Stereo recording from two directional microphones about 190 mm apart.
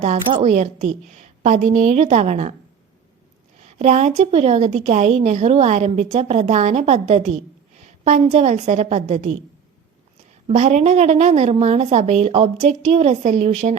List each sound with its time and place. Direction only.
0.3 s a woman's voice: 35° right (ahead or behind)
3.8 s a woman's voice: 40° right (ahead or behind)
10.4 s a woman's voice: 40° right (ahead or behind)